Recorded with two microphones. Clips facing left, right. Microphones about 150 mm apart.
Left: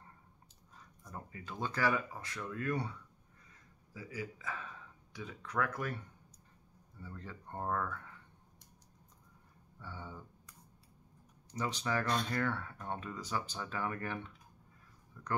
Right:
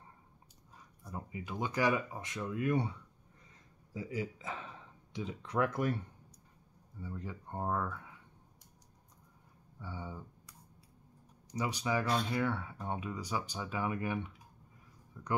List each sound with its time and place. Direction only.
1.0 s speech: 10° right (ahead or behind)
7.0 s speech: 15° right (ahead or behind)
9.8 s speech: 10° right (ahead or behind)
11.5 s speech: 10° right (ahead or behind)
15.2 s a sound: 15° right (ahead or behind)